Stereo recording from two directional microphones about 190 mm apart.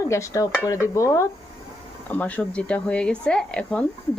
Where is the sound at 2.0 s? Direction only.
5° left (ahead or behind).